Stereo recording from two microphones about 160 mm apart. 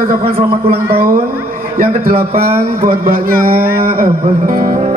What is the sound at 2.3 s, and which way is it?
Speech, 40° right (ahead or behind).